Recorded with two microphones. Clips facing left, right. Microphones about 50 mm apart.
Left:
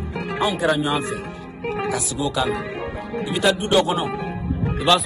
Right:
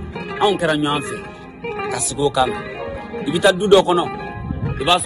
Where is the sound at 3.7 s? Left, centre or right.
Right.